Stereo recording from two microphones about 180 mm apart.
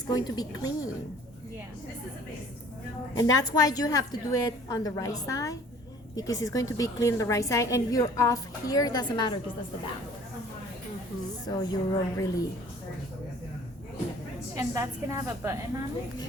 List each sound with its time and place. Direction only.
0.1 s a woman's voice: 20° left (ahead or behind)
3.2 s a woman's voice: 20° left (ahead or behind)
11.4 s a woman's voice: 20° left (ahead or behind)
14.5 s a woman's voice: 15° right (ahead or behind)